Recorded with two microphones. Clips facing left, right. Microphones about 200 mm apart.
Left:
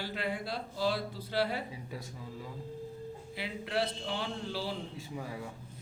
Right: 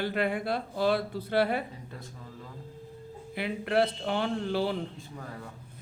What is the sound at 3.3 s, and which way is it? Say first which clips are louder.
Speech: right 8 dB; 55° right (ahead or behind).